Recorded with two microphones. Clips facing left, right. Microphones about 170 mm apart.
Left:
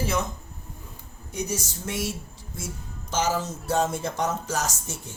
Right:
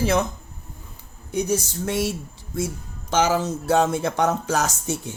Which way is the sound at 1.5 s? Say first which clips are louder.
Right 7 dB; 60° right (ahead or behind).